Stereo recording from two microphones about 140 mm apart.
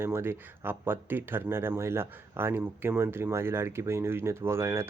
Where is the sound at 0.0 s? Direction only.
15° right (ahead or behind).